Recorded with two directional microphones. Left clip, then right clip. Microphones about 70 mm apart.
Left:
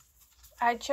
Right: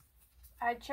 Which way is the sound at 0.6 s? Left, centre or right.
Left.